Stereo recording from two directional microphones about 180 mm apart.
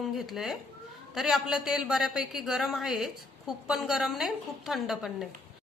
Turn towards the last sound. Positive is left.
turn(degrees=0)  # may be behind; listen again after turning